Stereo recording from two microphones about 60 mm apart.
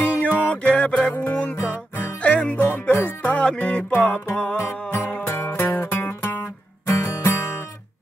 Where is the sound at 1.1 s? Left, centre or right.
Left.